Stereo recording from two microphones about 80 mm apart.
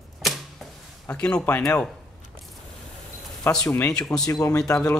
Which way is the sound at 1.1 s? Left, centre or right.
Centre.